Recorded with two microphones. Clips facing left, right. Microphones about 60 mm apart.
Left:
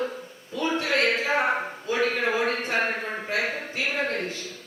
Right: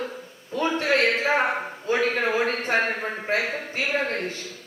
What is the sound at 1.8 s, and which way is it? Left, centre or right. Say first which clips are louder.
Speech: right 2 dB; right.